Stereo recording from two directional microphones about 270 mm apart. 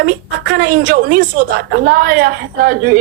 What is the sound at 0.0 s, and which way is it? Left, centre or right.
A man's voice, right.